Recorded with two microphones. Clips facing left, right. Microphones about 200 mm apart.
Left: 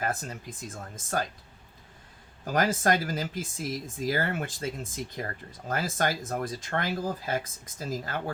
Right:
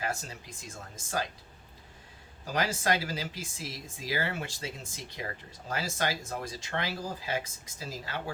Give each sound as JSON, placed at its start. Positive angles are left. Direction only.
{"t": 0.0, "sound": "speech", "side_deg": 50}
{"t": 2.4, "sound": "speech", "side_deg": 50}